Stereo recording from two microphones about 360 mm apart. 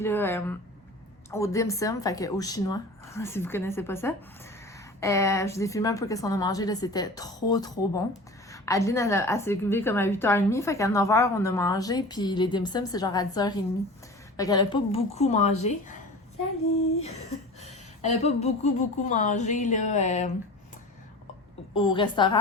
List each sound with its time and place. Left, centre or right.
0.0 s a woman's voice: centre
17.6 s a woman's voice: centre
21.8 s a woman's voice: centre